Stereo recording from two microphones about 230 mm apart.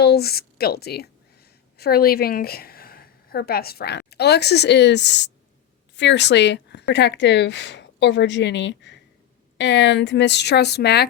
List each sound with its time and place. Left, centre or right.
0.0 s a woman's voice: left